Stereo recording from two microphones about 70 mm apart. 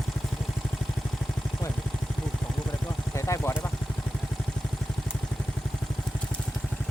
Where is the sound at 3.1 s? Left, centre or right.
Left.